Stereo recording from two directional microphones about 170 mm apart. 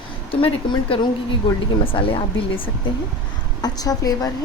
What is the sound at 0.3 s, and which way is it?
A woman's voice, 30° left (ahead or behind).